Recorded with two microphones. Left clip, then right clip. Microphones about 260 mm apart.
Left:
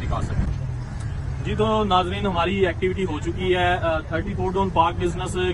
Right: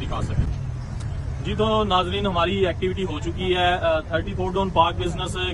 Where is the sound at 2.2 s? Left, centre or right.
Centre.